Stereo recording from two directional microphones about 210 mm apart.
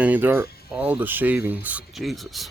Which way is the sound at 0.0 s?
10° right (ahead or behind).